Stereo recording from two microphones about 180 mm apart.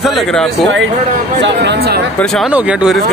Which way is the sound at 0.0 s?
Centre (ahead or behind).